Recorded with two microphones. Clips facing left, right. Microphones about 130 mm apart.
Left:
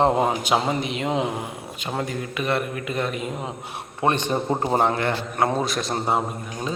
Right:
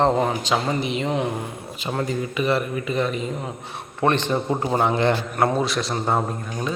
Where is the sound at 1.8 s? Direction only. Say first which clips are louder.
Right 3 dB; centre (ahead or behind).